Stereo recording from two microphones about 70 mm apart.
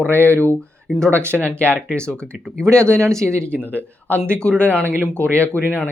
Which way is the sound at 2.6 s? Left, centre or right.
Centre.